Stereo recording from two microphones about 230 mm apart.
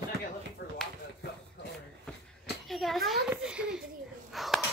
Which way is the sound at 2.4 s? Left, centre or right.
Centre.